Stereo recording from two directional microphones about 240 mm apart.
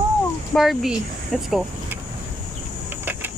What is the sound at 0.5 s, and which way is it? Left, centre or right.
Speech, centre.